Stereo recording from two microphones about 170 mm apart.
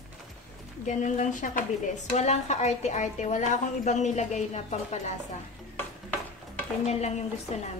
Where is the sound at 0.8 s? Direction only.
45° left (ahead or behind).